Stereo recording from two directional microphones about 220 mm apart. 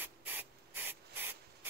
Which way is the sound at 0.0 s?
10° right (ahead or behind).